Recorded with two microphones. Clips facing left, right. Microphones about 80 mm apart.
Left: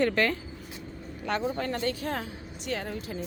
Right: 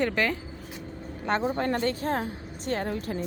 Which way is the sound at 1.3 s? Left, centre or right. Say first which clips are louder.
Right 3 dB; right.